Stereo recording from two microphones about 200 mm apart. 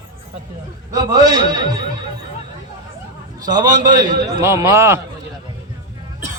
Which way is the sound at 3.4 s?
20° right (ahead or behind).